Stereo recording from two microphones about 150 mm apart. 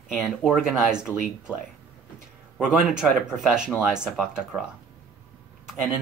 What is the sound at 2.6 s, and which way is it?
Speech, 5° right (ahead or behind).